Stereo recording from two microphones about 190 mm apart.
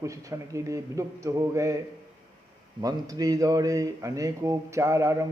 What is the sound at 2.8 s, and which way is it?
A man's voice, 20° right (ahead or behind).